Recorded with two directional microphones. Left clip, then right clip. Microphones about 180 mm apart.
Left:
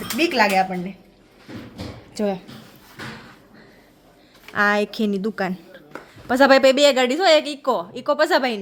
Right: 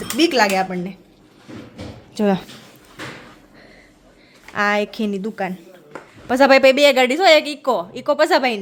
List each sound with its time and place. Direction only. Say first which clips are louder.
0.2 s speech: right 2 dB; 15° right (ahead or behind)
2.2 s speech: right 4 dB; 20° right (ahead or behind)
4.5 s a woman's voice: even; 5° left (ahead or behind)